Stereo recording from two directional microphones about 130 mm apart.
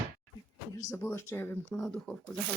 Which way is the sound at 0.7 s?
20° left (ahead or behind).